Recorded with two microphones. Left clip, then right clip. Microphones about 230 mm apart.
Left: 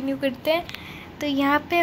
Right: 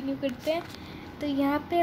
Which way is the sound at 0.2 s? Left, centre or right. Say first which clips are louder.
Left 7 dB; centre.